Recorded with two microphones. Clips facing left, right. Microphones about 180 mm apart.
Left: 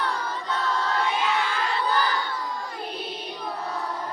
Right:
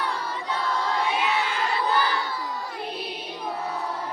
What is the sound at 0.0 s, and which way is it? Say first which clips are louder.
Choir: left 1 dB; 10° right (ahead or behind).